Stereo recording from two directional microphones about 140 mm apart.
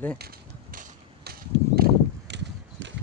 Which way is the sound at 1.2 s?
90° right.